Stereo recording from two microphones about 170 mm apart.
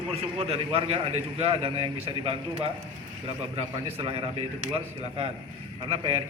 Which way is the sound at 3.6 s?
35° right (ahead or behind).